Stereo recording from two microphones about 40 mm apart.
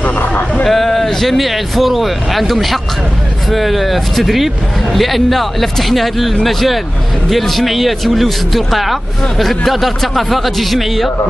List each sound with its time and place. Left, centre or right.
0.0 s music: left
0.7 s speech: centre